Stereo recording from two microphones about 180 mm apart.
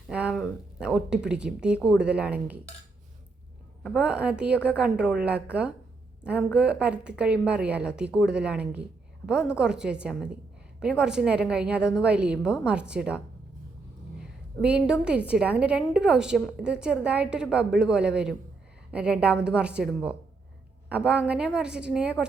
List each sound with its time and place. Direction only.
0.1 s speech: 5° right (ahead or behind)
3.8 s a woman's voice: 5° right (ahead or behind)